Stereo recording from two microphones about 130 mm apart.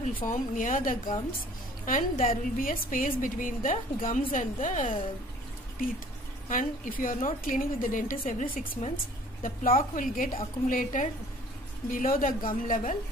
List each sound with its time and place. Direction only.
0.0 s a woman's voice: 85° left
6.5 s a woman's voice: 90° left; by 8.9 s 75° left (ahead or behind)
9.4 s a woman's voice: 90° left